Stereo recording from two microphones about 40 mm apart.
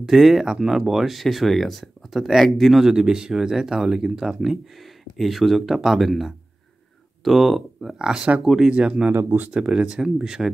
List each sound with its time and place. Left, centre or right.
0.0 s speech: centre
2.8 s speech: centre
8.0 s speech: centre
8.4 s speech: centre
8.6 s speech: right
9.1 s speech: right
9.5 s speech: right